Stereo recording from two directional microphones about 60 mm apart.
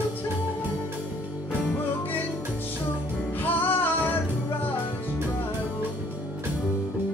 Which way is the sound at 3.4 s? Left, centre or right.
Left.